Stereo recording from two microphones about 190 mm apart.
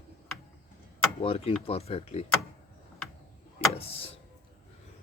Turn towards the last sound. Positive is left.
turn(degrees=30)  # may be behind; listen again after turning